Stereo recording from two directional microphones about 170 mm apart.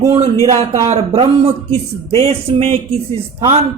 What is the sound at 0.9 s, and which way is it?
Speech, 35° right (ahead or behind).